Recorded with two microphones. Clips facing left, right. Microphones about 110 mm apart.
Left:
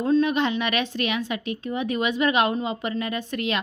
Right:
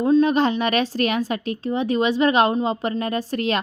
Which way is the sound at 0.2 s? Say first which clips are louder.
Right 4 dB; 35° right (ahead or behind).